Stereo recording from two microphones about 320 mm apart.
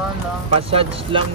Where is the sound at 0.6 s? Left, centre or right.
Centre.